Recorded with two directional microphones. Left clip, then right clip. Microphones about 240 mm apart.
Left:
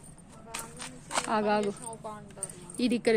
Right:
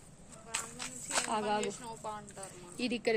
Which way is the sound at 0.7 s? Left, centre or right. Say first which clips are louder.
Left 4 dB; centre.